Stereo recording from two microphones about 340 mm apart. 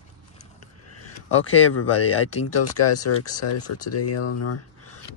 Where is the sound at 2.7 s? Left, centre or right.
Left.